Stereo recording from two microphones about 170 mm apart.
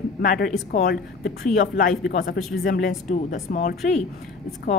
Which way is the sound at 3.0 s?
45° left (ahead or behind).